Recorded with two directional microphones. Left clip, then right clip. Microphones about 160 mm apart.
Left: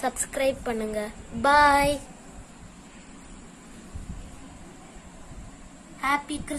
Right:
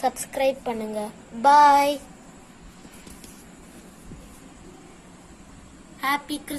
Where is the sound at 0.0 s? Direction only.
Centre (ahead or behind).